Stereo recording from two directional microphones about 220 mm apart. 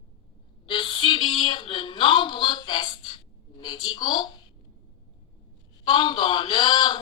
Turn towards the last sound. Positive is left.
turn(degrees=20)  # may be behind; listen again after turning